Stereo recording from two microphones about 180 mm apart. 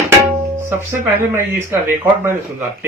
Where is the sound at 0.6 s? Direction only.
15° right (ahead or behind).